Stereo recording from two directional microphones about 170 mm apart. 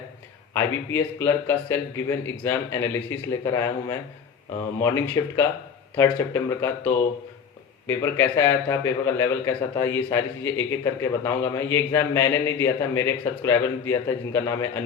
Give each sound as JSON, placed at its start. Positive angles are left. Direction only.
{"t": 0.5, "sound": "speech", "side_deg": 15}